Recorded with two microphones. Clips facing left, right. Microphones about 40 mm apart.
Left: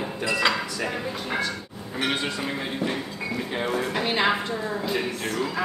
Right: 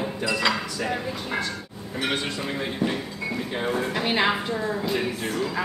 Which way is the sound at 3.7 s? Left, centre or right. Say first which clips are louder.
Right 1 dB; centre.